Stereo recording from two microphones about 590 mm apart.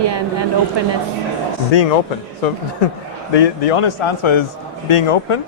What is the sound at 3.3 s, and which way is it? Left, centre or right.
A man's voice, left.